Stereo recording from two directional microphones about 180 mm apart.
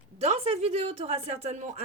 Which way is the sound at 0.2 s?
35° right (ahead or behind).